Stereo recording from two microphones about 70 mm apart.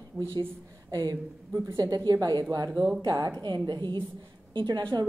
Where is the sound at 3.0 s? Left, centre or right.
Right.